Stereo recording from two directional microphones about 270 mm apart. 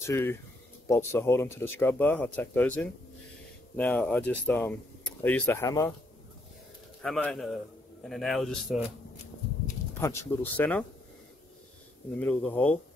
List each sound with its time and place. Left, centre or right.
0.0 s speech: centre
7.0 s a man's voice: centre
9.9 s speech: centre
12.2 s speech: centre